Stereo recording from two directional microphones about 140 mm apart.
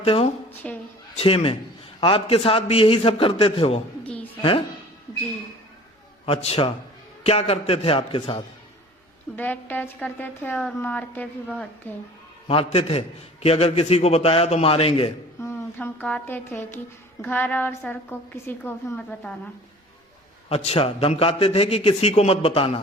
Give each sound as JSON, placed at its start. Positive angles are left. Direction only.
{"t": 0.0, "sound": "a woman's voice", "side_deg": 45}
{"t": 0.6, "sound": "speech", "side_deg": 10}
{"t": 1.1, "sound": "a man's voice", "side_deg": 45}
{"t": 4.0, "sound": "a sound", "side_deg": 10}
{"t": 6.2, "sound": "a man's voice", "side_deg": 45}
{"t": 9.3, "sound": "speech", "side_deg": 15}
{"t": 12.5, "sound": "a man's voice", "side_deg": 45}
{"t": 15.4, "sound": "speech", "side_deg": 15}
{"t": 20.5, "sound": "a man's voice", "side_deg": 45}